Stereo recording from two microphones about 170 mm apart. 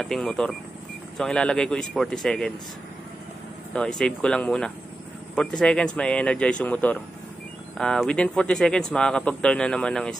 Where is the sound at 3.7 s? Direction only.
5° left (ahead or behind).